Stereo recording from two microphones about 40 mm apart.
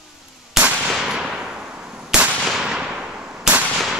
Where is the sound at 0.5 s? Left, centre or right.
Centre.